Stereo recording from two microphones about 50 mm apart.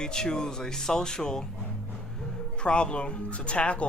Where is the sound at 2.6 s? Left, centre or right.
Left.